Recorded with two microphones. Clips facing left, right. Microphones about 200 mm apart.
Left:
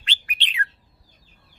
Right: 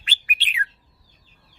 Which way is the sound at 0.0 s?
5° right (ahead or behind).